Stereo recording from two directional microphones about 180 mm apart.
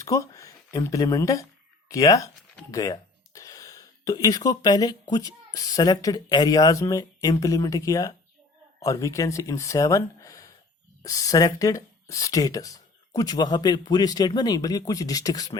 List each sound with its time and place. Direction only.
0.0 s speech: 15° left (ahead or behind)